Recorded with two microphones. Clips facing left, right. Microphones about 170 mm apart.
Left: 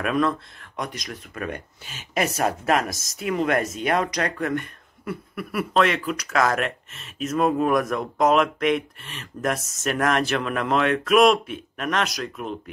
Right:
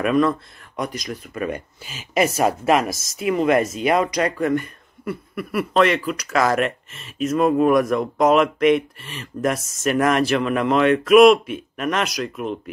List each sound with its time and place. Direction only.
0.0 s speech: centre (ahead or behind)